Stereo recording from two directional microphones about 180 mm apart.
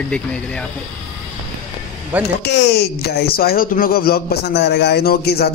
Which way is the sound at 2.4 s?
70° left (ahead or behind).